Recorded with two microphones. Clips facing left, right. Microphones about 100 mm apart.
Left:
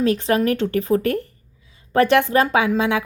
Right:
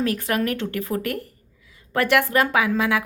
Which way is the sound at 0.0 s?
25° left (ahead or behind).